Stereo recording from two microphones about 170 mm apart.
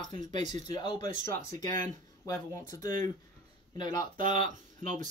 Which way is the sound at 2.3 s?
20° left (ahead or behind).